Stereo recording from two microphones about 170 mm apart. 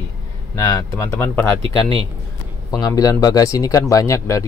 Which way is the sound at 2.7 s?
20° left (ahead or behind).